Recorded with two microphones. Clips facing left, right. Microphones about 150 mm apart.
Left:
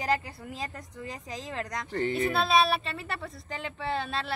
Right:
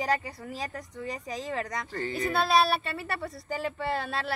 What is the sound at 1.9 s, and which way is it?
Speech, 25° left (ahead or behind).